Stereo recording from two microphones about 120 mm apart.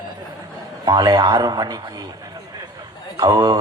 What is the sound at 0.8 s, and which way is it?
Speech, 40° right (ahead or behind).